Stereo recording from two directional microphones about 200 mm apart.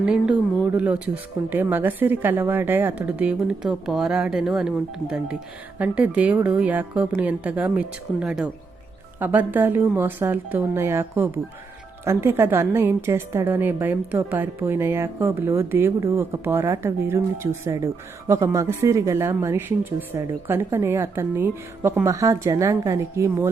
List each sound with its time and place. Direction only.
0.0 s a woman's voice: 5° right (ahead or behind)